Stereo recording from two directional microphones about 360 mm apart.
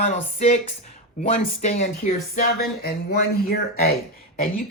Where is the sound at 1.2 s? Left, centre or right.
Centre.